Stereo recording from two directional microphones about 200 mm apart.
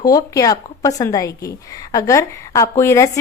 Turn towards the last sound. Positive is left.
turn(degrees=15)  # may be behind; listen again after turning